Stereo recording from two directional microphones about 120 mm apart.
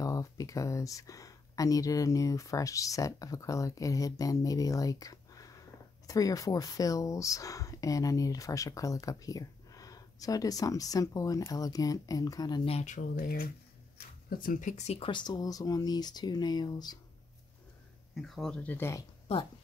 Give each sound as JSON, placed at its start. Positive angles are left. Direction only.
{"t": 0.0, "sound": "speech", "side_deg": 30}
{"t": 13.0, "sound": "speech", "side_deg": 90}
{"t": 14.6, "sound": "speech", "side_deg": 80}
{"t": 15.0, "sound": "speech", "side_deg": 40}
{"t": 18.1, "sound": "speech", "side_deg": 0}